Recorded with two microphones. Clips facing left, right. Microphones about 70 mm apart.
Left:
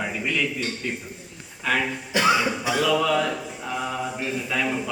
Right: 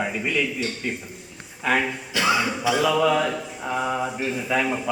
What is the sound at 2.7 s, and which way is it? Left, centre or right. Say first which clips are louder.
Speech: right 3 dB; centre.